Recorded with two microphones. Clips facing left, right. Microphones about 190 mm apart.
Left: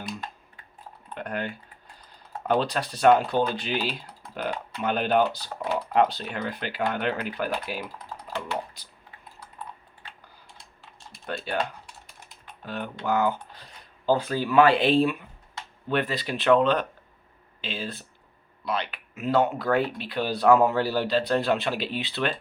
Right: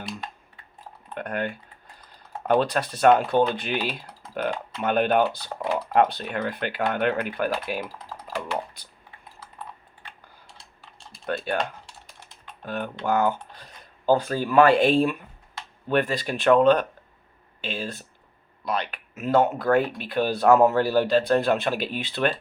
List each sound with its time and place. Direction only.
1.1 s typing: 55° right (ahead or behind)
2.5 s speech: 55° right (ahead or behind)
11.3 s speech: 55° right (ahead or behind)
12.6 s speech: 50° right (ahead or behind)